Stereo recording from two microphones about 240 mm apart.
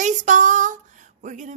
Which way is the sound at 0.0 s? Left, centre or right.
Right.